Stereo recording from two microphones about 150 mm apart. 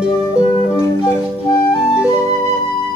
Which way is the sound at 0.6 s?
20° left (ahead or behind).